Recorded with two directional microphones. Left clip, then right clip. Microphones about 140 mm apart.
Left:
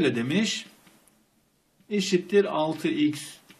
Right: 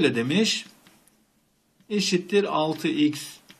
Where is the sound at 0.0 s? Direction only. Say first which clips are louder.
Right 3 dB; 40° right (ahead or behind).